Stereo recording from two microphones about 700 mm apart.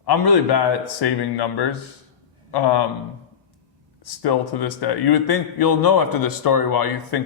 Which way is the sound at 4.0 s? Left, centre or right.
Left.